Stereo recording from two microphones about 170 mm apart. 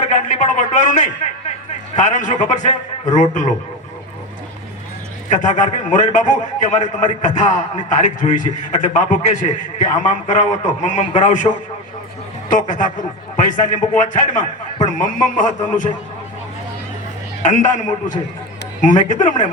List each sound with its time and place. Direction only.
0.0 s a man's voice: 45° left (ahead or behind)
5.3 s a man's voice: 45° left (ahead or behind)
12.5 s a man's voice: 50° left (ahead or behind)
17.4 s a man's voice: 45° left (ahead or behind)